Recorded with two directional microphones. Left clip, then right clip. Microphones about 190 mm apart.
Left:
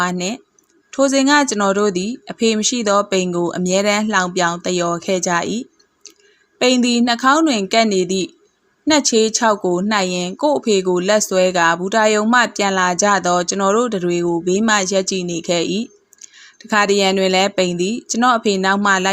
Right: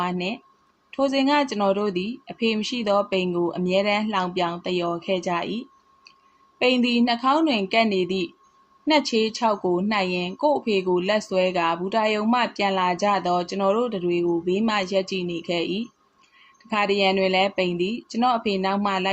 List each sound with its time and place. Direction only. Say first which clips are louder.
0.0 s speech: left 6 dB; 45° left (ahead or behind)